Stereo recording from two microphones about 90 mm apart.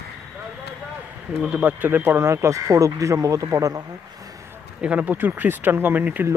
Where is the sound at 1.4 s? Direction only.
15° right (ahead or behind); by 3.8 s 40° right (ahead or behind).